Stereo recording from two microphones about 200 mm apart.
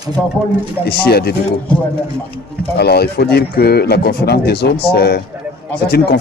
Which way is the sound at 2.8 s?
55° left (ahead or behind).